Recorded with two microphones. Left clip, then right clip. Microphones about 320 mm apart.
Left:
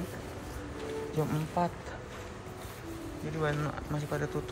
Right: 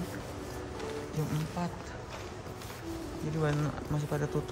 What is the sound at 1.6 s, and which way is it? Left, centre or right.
Speech, centre.